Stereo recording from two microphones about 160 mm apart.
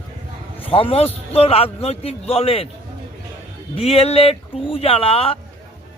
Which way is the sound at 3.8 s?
40° left (ahead or behind).